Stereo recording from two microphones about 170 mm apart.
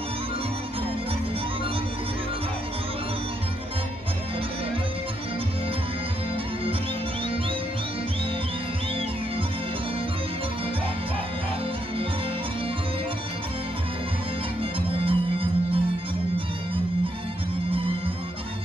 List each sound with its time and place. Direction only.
14.6 s music: 30° right (ahead or behind)
17.6 s music: 30° right (ahead or behind)